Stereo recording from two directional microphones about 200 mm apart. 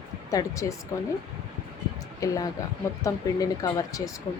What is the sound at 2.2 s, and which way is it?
Speech, 15° left (ahead or behind).